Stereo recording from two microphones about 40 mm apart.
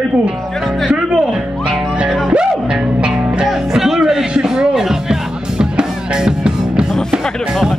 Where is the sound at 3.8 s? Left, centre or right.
Centre.